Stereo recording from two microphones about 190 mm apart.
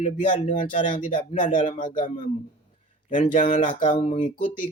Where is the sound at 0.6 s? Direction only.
25° left (ahead or behind).